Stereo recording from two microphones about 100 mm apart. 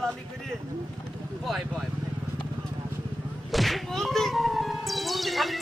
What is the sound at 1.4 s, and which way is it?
Speech, centre (ahead or behind).